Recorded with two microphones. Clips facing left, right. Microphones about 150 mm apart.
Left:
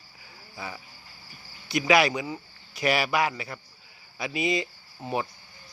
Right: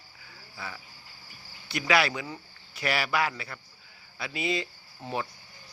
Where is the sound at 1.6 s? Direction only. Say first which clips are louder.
Left 4 dB; 15° left (ahead or behind).